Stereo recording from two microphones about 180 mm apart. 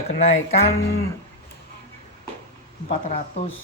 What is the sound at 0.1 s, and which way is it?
Speech, 35° left (ahead or behind).